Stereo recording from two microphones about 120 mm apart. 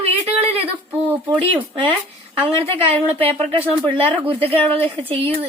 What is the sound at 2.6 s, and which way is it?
A woman's voice, 50° right (ahead or behind).